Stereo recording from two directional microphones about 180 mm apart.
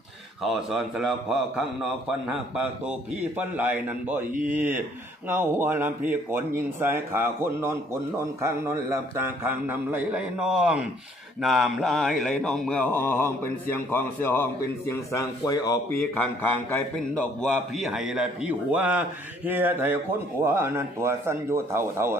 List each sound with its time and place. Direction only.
0.4 s a man's voice: centre (ahead or behind); by 15.8 s 20° left (ahead or behind)
16.7 s a man's voice: 5° left (ahead or behind); by 22.2 s 15° right (ahead or behind)